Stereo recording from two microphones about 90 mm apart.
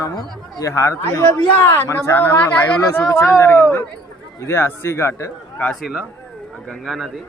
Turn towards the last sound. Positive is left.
turn(degrees=0)  # may be behind; listen again after turning